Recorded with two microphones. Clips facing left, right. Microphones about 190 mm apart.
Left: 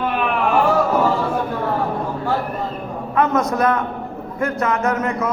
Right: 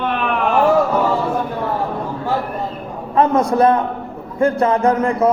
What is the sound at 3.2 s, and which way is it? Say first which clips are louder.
A man's voice: right 4 dB; 30° right (ahead or behind).